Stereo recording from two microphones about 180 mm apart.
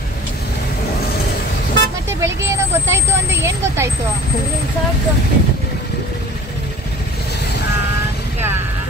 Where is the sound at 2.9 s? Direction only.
15° right (ahead or behind).